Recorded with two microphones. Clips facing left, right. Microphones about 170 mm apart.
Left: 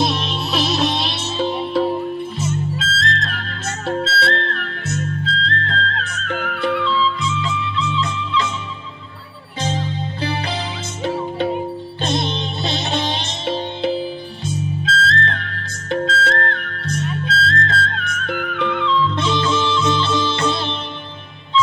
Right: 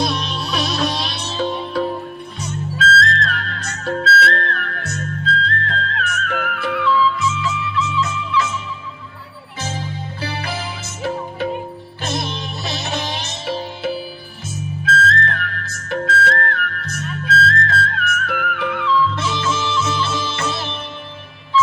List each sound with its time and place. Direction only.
0.0 s music: 25° left (ahead or behind)
9.7 s music: 25° left (ahead or behind)
12.0 s music: 25° left (ahead or behind)